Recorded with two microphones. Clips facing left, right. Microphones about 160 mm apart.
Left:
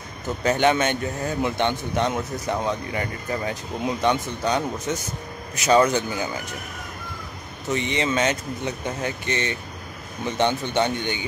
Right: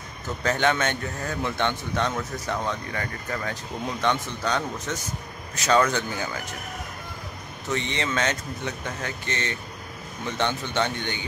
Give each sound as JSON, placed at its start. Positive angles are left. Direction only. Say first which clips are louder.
{"t": 0.4, "sound": "speech", "louder": "left 4 dB", "side_deg": 15}
{"t": 7.7, "sound": "speech", "louder": "left 4 dB", "side_deg": 15}